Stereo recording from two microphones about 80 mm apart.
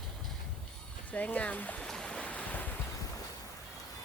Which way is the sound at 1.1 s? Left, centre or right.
Centre.